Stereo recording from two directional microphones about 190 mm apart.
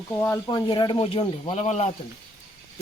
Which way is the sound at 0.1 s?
15° left (ahead or behind).